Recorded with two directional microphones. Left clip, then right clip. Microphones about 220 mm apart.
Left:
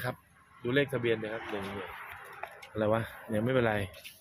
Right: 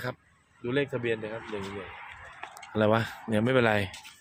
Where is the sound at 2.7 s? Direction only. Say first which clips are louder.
Right 5 dB; 45° right (ahead or behind).